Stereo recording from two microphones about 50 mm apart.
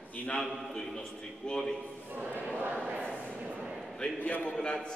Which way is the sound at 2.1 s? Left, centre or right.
Right.